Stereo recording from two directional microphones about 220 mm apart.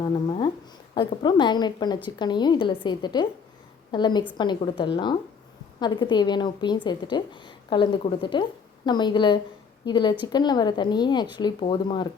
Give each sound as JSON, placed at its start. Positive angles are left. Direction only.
{"t": 0.0, "sound": "a woman's voice", "side_deg": 20}